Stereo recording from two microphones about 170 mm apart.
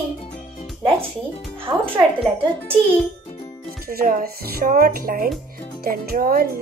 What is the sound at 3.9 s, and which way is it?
Speech, 55° right (ahead or behind).